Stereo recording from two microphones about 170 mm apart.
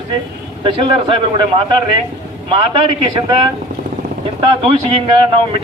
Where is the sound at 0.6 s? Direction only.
30° right (ahead or behind).